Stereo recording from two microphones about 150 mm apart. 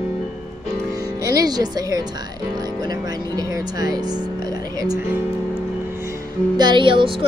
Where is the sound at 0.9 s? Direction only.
25° right (ahead or behind).